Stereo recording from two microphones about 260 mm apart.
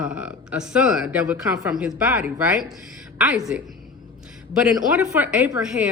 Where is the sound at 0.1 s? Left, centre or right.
Centre.